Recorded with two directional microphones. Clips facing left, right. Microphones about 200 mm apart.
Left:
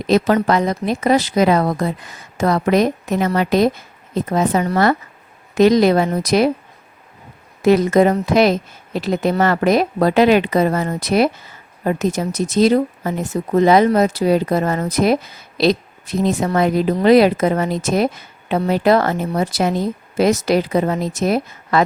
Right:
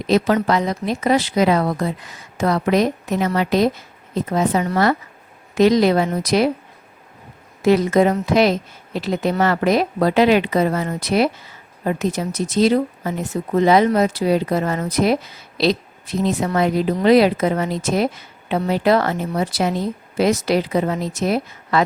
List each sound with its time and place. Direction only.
0.4 s speech: 50° left (ahead or behind)
7.6 s speech: 45° left (ahead or behind)